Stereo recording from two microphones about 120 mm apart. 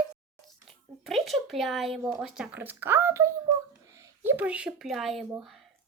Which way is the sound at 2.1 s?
5° right (ahead or behind).